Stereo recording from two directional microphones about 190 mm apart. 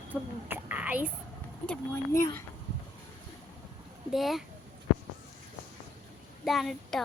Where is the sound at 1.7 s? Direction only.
15° left (ahead or behind).